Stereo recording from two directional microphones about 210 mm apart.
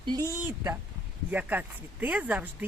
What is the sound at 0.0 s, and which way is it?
Speech, 20° right (ahead or behind).